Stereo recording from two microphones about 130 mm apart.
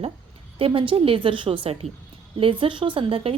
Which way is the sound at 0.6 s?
45° right (ahead or behind).